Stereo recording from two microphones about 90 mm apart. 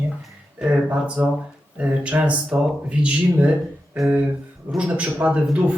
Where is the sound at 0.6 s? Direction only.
15° right (ahead or behind).